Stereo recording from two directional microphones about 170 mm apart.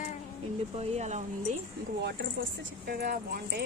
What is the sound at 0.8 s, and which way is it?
Speech, 40° right (ahead or behind).